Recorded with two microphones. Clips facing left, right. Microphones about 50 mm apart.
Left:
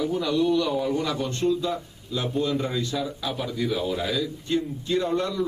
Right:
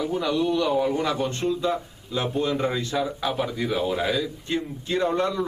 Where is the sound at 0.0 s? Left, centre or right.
Centre.